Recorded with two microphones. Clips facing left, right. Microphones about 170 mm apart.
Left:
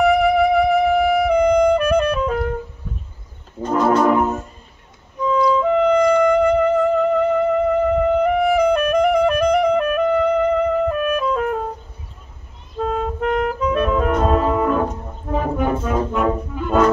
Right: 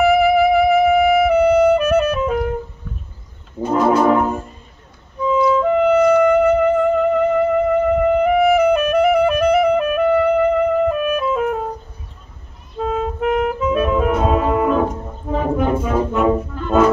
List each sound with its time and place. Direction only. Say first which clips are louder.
0.0 s music: right 2 dB; 5° right (ahead or behind)
3.6 s brass instrument: right 1 dB; 10° right (ahead or behind)
4.1 s brass instrument: right 1 dB; 5° left (ahead or behind)
5.2 s music: right 1 dB; 5° right (ahead or behind)
8.1 s clarinet: right 2 dB; 5° right (ahead or behind)
12.7 s clarinet: right 1 dB; 5° right (ahead or behind)
16.6 s brass instrument: left 1 dB; 10° left (ahead or behind)